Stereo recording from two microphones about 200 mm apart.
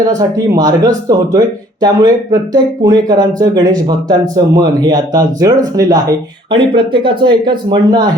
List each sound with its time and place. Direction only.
0.2 s speech: 15° right (ahead or behind)